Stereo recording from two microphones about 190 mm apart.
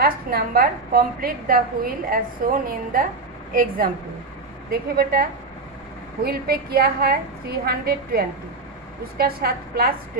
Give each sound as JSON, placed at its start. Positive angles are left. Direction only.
{"t": 0.0, "sound": "a woman's voice", "side_deg": -50}